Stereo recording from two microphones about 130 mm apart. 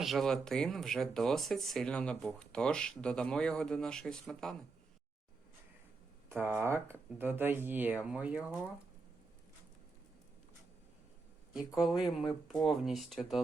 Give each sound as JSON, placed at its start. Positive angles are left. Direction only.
{"t": 0.0, "sound": "speech", "side_deg": 0}
{"t": 6.2, "sound": "speech", "side_deg": -15}
{"t": 11.8, "sound": "speech", "side_deg": 0}